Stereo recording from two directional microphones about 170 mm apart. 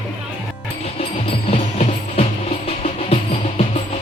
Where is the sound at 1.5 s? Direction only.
40° left (ahead or behind).